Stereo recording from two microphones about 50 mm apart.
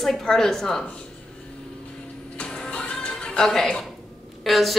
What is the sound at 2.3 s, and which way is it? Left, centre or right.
Music, centre.